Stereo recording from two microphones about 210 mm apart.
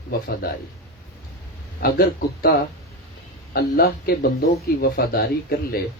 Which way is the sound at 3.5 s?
45° left (ahead or behind).